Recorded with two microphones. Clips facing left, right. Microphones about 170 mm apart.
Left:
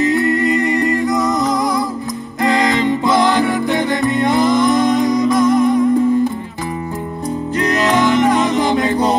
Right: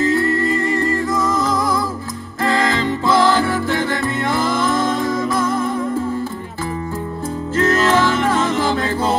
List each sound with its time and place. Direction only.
0.0 s music: 20° left (ahead or behind)
7.5 s music: 15° left (ahead or behind)